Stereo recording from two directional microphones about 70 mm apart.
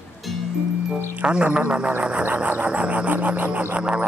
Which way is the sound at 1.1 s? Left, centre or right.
Centre.